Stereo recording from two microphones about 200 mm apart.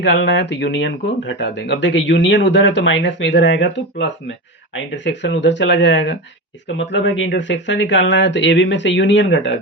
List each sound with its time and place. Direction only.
0.0 s speech: 60° left (ahead or behind)